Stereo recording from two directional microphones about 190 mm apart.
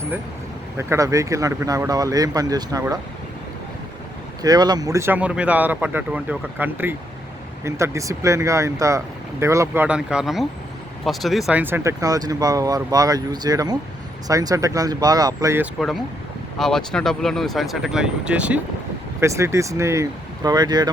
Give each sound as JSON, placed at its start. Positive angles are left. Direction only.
{"t": 0.8, "sound": "speech", "side_deg": -15}
{"t": 4.4, "sound": "speech", "side_deg": -20}
{"t": 16.6, "sound": "speech", "side_deg": 0}